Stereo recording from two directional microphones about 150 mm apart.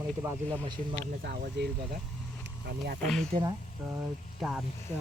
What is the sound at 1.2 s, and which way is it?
Speech, 85° right.